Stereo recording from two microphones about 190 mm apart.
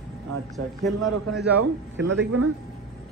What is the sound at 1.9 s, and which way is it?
Speech, 70° right (ahead or behind).